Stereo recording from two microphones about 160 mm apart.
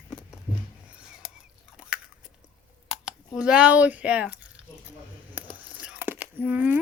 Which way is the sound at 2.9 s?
5° right (ahead or behind).